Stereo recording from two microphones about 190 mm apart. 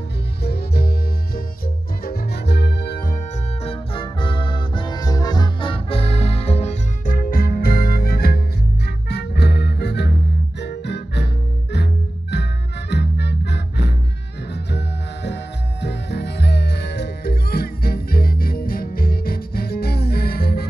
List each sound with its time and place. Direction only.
0.4 s music: 55° left (ahead or behind)
3.6 s music: 25° left (ahead or behind); by 11.2 s 65° left (ahead or behind)
12.9 s music: 60° left (ahead or behind)
15.8 s music: 60° left (ahead or behind)